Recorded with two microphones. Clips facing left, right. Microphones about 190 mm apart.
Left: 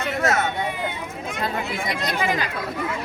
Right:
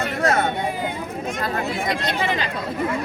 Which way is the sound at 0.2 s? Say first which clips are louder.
Right 2 dB; 35° right (ahead or behind).